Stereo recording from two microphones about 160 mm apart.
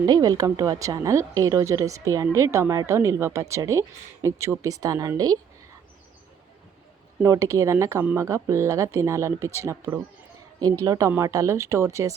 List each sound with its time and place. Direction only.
0.0 s a woman's voice: 25° right (ahead or behind)
7.2 s a woman's voice: 20° right (ahead or behind)